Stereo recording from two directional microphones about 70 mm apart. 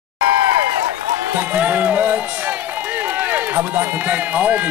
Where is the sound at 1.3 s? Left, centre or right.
Right.